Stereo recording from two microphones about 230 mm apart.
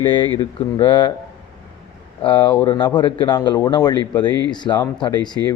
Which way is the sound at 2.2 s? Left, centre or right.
Centre.